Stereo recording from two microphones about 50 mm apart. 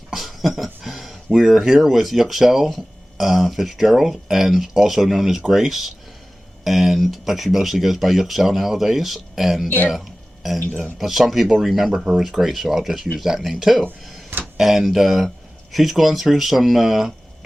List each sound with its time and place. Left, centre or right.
0.1 s speech: centre
9.6 s speech: left
9.9 s a sound: centre
10.9 s speech: centre